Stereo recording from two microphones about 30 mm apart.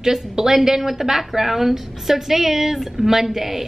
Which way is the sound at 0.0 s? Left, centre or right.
Centre.